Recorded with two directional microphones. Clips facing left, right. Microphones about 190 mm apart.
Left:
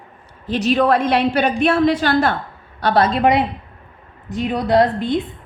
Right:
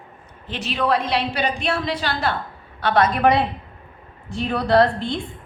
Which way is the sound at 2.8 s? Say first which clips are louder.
Left 2 dB; 35° left (ahead or behind).